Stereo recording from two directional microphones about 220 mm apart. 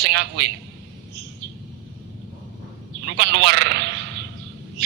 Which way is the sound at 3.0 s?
50° right (ahead or behind).